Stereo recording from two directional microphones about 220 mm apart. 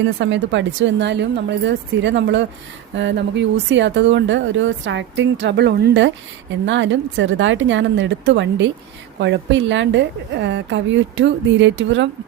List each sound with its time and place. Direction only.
0.0 s speech: 55° right (ahead or behind)